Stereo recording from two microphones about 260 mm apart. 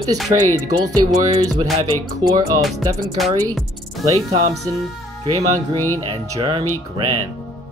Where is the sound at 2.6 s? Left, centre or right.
Centre.